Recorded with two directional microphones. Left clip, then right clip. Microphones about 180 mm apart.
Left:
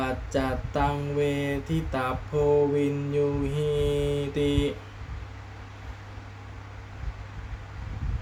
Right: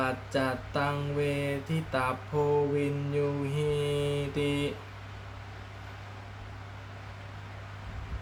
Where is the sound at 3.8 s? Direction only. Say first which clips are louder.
Left 4 dB; centre (ahead or behind).